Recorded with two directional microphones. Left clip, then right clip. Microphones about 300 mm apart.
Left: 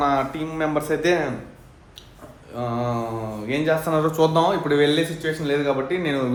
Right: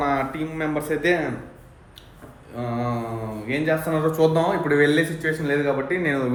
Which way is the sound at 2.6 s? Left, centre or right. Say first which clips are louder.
Left 2 dB; centre.